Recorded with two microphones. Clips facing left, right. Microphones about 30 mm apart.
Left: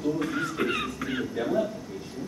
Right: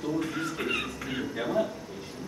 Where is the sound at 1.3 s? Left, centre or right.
Centre.